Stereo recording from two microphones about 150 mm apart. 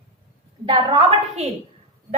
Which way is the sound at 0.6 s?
40° right (ahead or behind).